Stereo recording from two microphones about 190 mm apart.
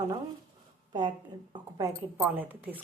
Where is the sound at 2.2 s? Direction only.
10° right (ahead or behind).